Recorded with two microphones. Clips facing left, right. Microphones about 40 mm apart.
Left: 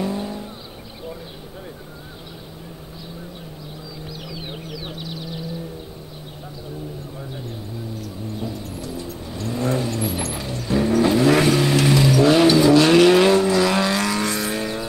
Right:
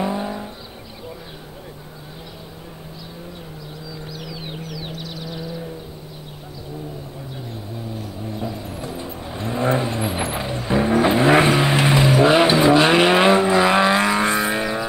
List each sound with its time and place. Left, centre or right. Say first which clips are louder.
0.0 s vehicle: right 2 dB; right
4.1 s vehicle: even; centre
7.9 s vehicle: right 2 dB; right